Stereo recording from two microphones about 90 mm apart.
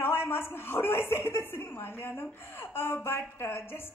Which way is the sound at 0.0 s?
25° left (ahead or behind).